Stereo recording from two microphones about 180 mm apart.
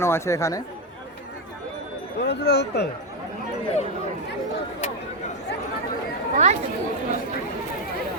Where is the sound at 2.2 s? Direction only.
70° left (ahead or behind).